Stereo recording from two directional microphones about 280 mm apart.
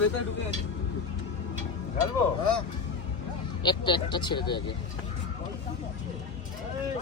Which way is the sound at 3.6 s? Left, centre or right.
Centre.